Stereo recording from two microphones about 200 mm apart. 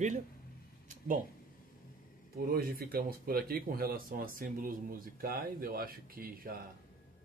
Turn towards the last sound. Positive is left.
turn(degrees=-45)  # may be behind; listen again after turning